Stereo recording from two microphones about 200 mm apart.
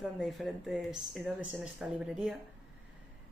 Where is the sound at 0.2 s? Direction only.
Centre (ahead or behind).